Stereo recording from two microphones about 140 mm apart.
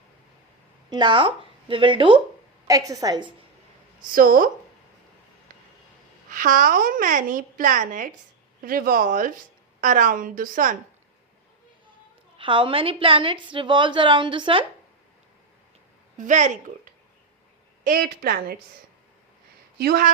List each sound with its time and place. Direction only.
0.9 s speech: 30° right (ahead or behind)
2.6 s a woman's voice: 25° right (ahead or behind)
4.0 s speech: 85° right
6.3 s a woman's voice: 70° right (ahead or behind)
8.6 s a woman's voice: 90° right
12.4 s a woman's voice: 35° right (ahead or behind)
16.1 s speech: 60° right (ahead or behind)
17.8 s a woman's voice: 90° right
19.8 s a woman's voice: 90° right